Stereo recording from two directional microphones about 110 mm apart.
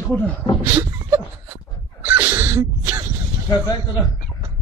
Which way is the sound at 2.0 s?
15° right (ahead or behind).